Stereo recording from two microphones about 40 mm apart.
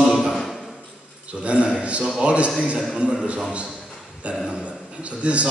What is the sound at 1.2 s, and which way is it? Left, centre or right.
A man's voice, right.